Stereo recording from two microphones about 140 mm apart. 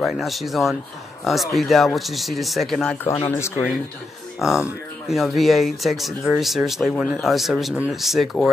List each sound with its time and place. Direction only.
0.0 s speech: centre (ahead or behind)
3.3 s speech: 20° left (ahead or behind)
4.4 s speech: 5° right (ahead or behind)